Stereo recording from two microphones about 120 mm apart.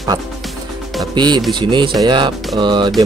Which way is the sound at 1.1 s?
40° right (ahead or behind).